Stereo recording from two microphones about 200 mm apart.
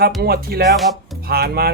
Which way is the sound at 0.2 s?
50° right (ahead or behind).